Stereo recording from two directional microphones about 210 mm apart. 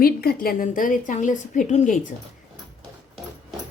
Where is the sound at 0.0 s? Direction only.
45° left (ahead or behind).